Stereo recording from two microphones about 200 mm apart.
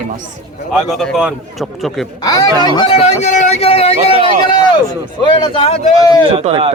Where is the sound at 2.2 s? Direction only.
20° left (ahead or behind).